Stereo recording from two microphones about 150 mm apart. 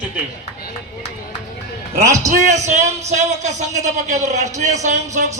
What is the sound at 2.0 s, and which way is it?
Speech, 20° right (ahead or behind).